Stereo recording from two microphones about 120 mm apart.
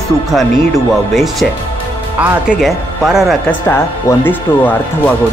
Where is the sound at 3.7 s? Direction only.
20° left (ahead or behind).